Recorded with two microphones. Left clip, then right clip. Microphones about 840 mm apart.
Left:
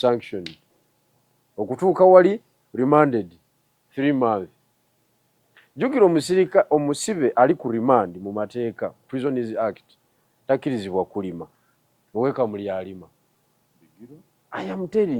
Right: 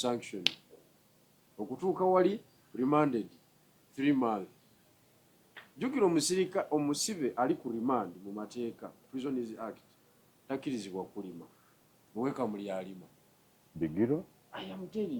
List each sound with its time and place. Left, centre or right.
0.0 s speech: left
1.8 s speech: left
5.8 s speech: left
14.0 s speech: right
14.5 s speech: left